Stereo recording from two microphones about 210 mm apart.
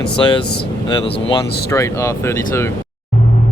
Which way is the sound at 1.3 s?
15° left (ahead or behind).